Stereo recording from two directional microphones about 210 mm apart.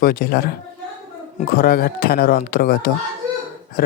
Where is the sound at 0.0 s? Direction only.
45° left (ahead or behind).